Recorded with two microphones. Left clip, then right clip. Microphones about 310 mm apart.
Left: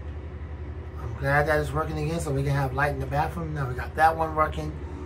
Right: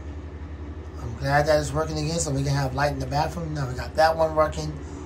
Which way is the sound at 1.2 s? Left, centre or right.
Centre.